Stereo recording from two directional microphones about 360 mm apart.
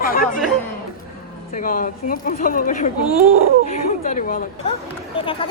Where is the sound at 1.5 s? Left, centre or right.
Left.